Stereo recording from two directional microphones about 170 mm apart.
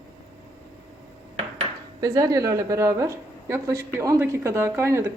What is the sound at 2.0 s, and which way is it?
Speech, 20° right (ahead or behind).